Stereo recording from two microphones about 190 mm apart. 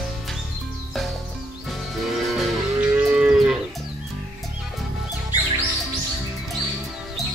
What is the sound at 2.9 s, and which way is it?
Moo, 10° right (ahead or behind).